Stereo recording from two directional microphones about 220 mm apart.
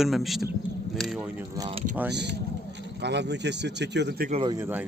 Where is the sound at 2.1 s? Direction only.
50° right (ahead or behind).